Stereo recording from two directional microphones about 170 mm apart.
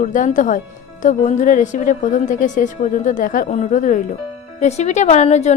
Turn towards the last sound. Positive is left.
turn(degrees=40)  # may be behind; listen again after turning